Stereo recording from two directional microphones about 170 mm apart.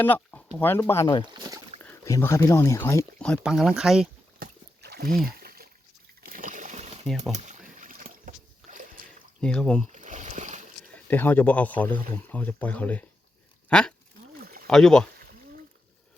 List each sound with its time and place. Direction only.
0.0 s a sound: 10° left (ahead or behind)
0.5 s speech: 10° left (ahead or behind)
1.2 s rowboat: 25° right (ahead or behind)
1.8 s speech: 15° left (ahead or behind)
3.2 s speech: 5° left (ahead or behind)
4.4 s a sound: 70° right (ahead or behind)
6.2 s splash: 55° right (ahead or behind)
7.3 s boat: 45° right (ahead or behind)
9.4 s speech: 5° left (ahead or behind)
9.9 s rowboat: 45° right (ahead or behind)
10.9 s speech: 10° left (ahead or behind)
13.7 s a sound: 5° left (ahead or behind)
14.4 s a sound: 60° right (ahead or behind)
14.7 s speech: 5° left (ahead or behind)